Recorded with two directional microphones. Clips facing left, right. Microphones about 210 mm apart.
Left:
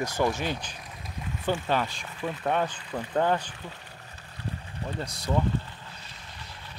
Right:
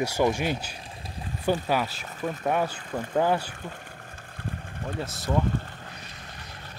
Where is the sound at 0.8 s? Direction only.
30° right (ahead or behind).